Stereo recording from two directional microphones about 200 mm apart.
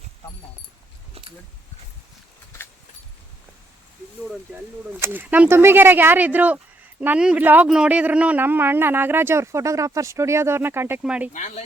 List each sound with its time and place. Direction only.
1.2 s a sound: 30° right (ahead or behind)
4.9 s a man's voice: 10° right (ahead or behind)
11.3 s speech: 35° left (ahead or behind)